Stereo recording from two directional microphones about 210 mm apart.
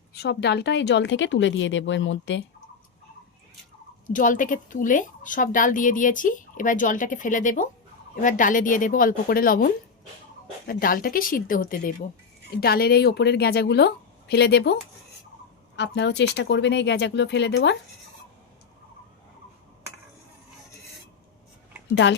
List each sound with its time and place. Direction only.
0.2 s speech: 55° left (ahead or behind)
4.0 s a woman's voice: 40° left (ahead or behind); by 17.7 s 55° left (ahead or behind)